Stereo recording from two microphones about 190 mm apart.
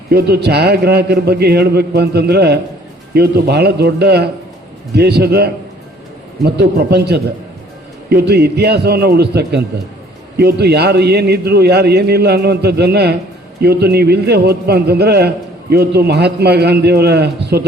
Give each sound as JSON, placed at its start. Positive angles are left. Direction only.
{"t": 0.1, "sound": "a man's voice", "side_deg": -60}